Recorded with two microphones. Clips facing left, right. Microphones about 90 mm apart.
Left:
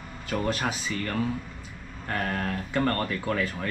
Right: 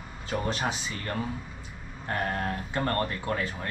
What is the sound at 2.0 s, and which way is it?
Speech, 20° right (ahead or behind).